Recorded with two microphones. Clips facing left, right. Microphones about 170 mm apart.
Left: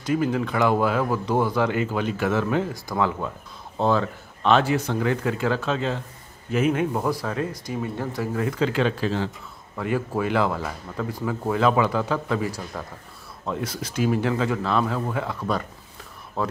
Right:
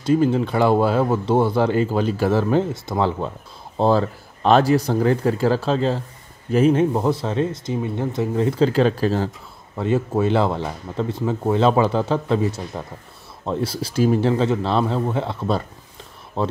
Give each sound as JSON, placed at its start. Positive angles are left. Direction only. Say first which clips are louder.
{"t": 0.0, "sound": "speech", "louder": "right 5 dB", "side_deg": -30}
{"t": 9.8, "sound": "speech", "louder": "right 5 dB", "side_deg": -25}